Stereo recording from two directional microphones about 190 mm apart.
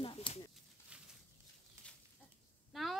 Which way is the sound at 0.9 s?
5° right (ahead or behind).